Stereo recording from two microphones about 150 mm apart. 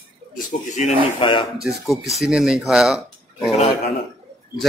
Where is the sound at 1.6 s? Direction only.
Centre (ahead or behind).